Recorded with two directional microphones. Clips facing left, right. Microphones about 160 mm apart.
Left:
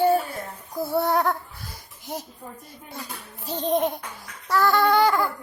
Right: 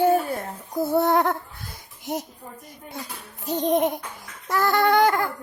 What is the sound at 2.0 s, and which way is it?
Speech, 20° right (ahead or behind).